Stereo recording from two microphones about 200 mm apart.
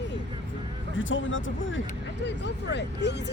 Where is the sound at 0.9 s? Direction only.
75° left (ahead or behind).